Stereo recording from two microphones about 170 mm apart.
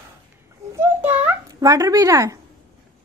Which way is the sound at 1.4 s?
20° right (ahead or behind).